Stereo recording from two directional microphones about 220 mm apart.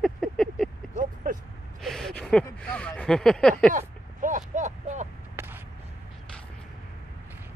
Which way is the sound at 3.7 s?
35° right (ahead or behind).